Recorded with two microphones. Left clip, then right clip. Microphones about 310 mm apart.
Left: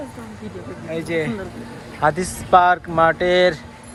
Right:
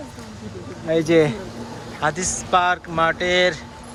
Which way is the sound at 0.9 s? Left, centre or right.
Right.